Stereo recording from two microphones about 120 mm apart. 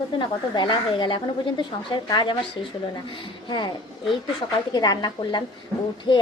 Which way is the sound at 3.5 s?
35° left (ahead or behind).